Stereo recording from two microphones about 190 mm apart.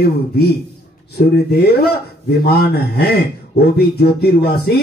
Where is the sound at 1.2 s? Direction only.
55° left (ahead or behind).